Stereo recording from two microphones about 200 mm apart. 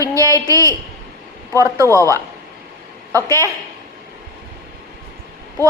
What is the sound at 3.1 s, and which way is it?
Speech, 15° right (ahead or behind).